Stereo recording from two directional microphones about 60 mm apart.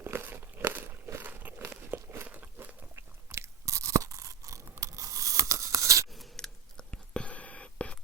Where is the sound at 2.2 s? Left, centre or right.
Right.